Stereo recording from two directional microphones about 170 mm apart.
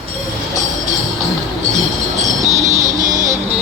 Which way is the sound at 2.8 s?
50° right (ahead or behind).